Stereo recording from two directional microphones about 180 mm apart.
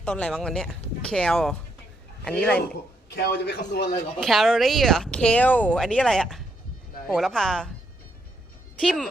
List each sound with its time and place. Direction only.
0.0 s speech: 5° left (ahead or behind)
3.2 s a man's voice: 65° left (ahead or behind)
4.2 s speech: centre (ahead or behind)
8.8 s speech: 5° left (ahead or behind)